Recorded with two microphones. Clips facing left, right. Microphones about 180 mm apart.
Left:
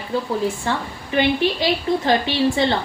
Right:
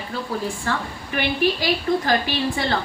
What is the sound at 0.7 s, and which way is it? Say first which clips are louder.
A woman's voice: left 2 dB; 20° left (ahead or behind).